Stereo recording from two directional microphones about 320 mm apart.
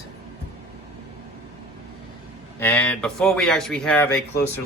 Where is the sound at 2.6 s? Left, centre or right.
Centre.